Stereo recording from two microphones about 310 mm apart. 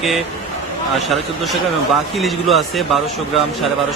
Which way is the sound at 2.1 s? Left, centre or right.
Centre.